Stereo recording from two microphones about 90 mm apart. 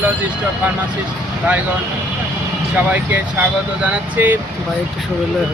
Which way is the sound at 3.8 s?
20° right (ahead or behind).